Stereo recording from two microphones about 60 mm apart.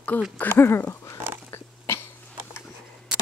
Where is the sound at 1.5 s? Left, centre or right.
Left.